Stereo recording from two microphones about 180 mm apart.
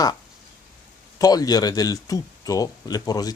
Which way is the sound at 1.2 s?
20° left (ahead or behind).